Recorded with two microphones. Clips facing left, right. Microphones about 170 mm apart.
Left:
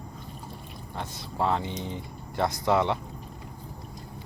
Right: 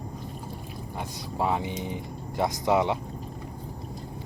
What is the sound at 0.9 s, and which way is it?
Speech, 15° right (ahead or behind).